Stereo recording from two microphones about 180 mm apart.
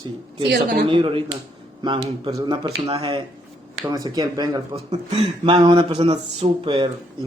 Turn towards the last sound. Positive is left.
turn(degrees=-30)  # may be behind; listen again after turning